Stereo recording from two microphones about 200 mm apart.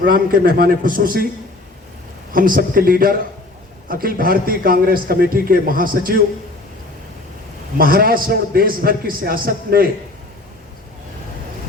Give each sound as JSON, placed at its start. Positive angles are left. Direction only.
{"t": 0.0, "sound": "a man's voice", "side_deg": -45}
{"t": 2.3, "sound": "a man's voice", "side_deg": -45}
{"t": 7.8, "sound": "a man's voice", "side_deg": -45}